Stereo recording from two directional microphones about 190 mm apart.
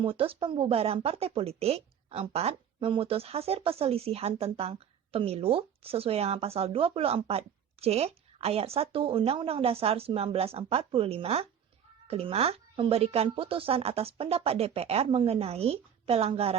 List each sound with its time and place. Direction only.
0.0 s speech: 30° right (ahead or behind)